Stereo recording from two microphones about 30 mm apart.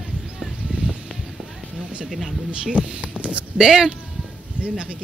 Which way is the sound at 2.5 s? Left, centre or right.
Right.